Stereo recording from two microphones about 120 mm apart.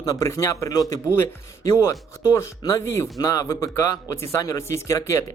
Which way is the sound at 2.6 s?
35° left (ahead or behind).